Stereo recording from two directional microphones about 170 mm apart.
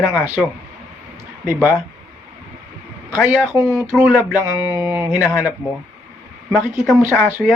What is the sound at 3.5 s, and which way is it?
Speech, 20° right (ahead or behind).